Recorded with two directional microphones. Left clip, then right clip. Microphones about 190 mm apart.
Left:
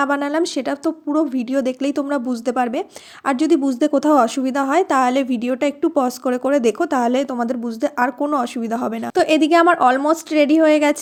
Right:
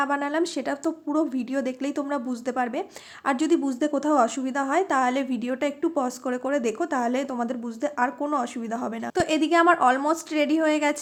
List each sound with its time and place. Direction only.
0.0 s speech: 30° left (ahead or behind)